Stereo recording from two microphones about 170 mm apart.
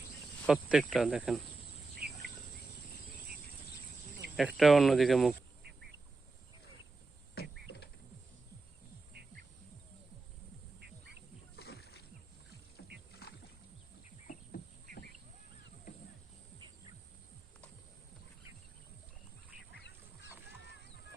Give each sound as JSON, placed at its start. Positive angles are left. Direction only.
{"t": 0.4, "sound": "speech", "side_deg": -5}
{"t": 2.0, "sound": "insect", "side_deg": -65}
{"t": 4.4, "sound": "speech", "side_deg": 0}
{"t": 7.4, "sound": "a sound", "side_deg": 70}
{"t": 10.8, "sound": "quack", "side_deg": -70}
{"t": 11.5, "sound": "rowboat", "side_deg": 70}